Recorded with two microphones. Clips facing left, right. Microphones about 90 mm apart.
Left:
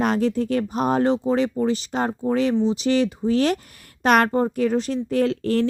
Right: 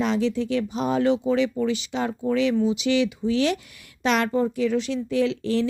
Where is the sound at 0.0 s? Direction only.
50° left (ahead or behind).